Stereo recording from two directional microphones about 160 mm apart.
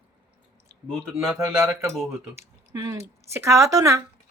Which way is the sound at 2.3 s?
15° right (ahead or behind).